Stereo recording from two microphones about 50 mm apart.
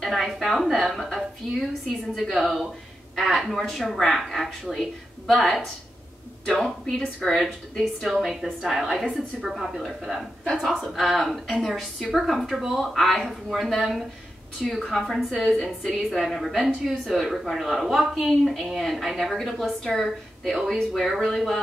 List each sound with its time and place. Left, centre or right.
0.0 s a sound: centre
0.3 s a woman's voice: centre
7.2 s a woman's voice: centre
8.1 s a woman's voice: centre